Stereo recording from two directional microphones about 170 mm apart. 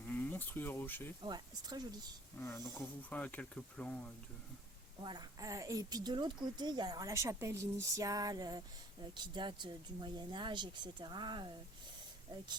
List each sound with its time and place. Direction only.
0.1 s speech: 10° left (ahead or behind)
1.2 s a woman's voice: 25° right (ahead or behind)
2.4 s speech: 10° left (ahead or behind)
5.0 s a woman's voice: 25° right (ahead or behind)